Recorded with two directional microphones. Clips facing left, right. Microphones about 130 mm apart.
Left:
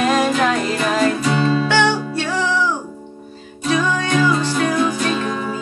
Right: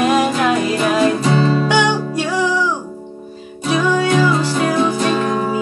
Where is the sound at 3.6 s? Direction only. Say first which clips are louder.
Right 3 dB; 10° right (ahead or behind).